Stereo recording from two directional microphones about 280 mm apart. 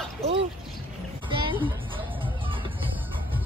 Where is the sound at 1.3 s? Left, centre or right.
Centre.